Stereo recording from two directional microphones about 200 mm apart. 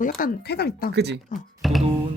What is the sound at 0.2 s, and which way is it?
Speech, 55° left (ahead or behind).